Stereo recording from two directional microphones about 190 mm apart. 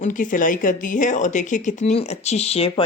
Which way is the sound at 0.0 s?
45° left (ahead or behind).